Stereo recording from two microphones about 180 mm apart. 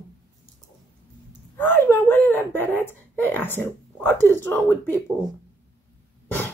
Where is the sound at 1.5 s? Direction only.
10° left (ahead or behind).